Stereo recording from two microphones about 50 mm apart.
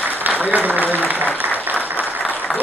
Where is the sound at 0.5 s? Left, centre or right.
Right.